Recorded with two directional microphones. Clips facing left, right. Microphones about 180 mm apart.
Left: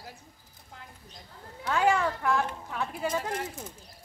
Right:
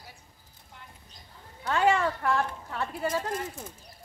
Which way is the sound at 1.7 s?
10° left (ahead or behind).